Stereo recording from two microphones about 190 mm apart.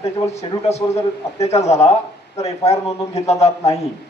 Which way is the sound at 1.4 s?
35° left (ahead or behind).